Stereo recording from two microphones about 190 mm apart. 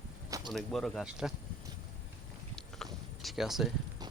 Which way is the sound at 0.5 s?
Centre (ahead or behind).